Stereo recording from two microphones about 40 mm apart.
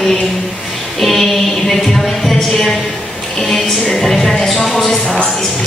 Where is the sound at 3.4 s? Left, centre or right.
Centre.